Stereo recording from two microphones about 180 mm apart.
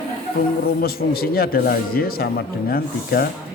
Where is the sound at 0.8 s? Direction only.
55° left (ahead or behind).